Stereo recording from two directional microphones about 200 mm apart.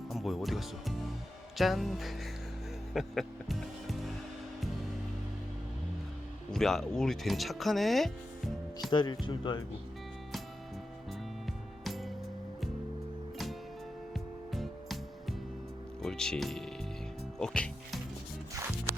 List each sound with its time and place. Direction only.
0.1 s music: centre (ahead or behind)
1.5 s speech: centre (ahead or behind)
2.9 s music: centre (ahead or behind)
6.5 s speech: centre (ahead or behind)
8.9 s speech: 20° left (ahead or behind)
11.4 s music: centre (ahead or behind)
14.1 s music: centre (ahead or behind)
16.0 s speech: 5° left (ahead or behind)